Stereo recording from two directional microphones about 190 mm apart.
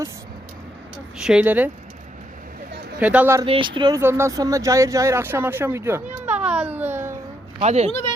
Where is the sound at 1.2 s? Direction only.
5° right (ahead or behind).